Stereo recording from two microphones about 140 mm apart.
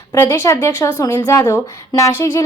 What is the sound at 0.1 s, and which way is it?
A woman's voice, 20° left (ahead or behind).